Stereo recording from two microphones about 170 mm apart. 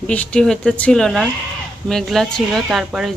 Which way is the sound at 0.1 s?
5° left (ahead or behind).